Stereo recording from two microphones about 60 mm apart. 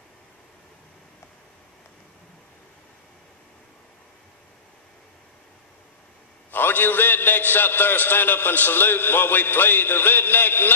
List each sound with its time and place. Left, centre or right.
6.5 s a man's voice: left